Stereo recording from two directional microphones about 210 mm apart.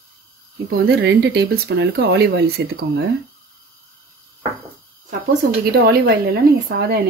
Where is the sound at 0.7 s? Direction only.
50° right (ahead or behind).